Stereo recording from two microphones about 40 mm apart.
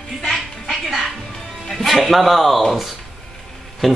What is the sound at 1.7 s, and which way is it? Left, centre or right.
Speech, centre.